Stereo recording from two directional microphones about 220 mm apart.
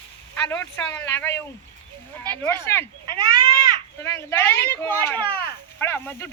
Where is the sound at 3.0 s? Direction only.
20° right (ahead or behind).